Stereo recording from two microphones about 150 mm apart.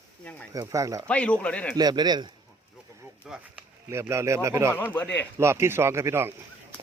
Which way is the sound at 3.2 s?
5° right (ahead or behind).